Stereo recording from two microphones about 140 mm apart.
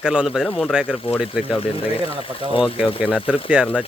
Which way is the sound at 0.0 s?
5° right (ahead or behind).